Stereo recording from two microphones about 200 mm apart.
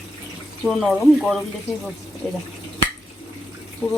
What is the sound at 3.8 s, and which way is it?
Speech, 15° left (ahead or behind).